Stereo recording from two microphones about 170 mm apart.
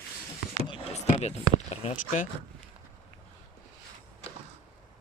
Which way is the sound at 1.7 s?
35° left (ahead or behind).